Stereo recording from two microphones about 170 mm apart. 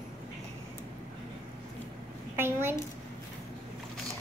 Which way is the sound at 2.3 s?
15° right (ahead or behind).